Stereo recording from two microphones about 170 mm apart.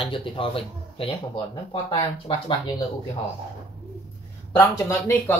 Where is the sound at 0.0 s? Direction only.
30° left (ahead or behind).